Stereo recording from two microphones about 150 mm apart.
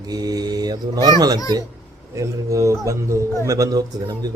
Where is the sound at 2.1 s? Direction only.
20° right (ahead or behind).